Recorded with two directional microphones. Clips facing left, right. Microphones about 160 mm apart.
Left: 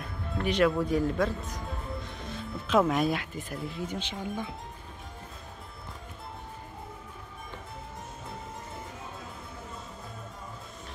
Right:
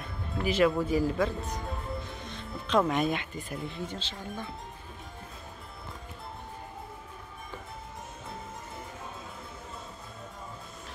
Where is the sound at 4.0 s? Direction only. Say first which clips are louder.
Left 5 dB; 15° left (ahead or behind).